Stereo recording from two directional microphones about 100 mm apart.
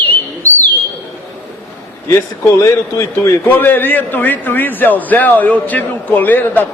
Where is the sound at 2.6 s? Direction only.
30° left (ahead or behind).